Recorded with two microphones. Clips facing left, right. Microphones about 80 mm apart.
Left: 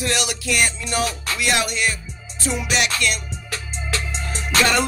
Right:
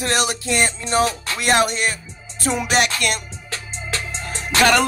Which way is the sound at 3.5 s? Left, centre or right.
Right.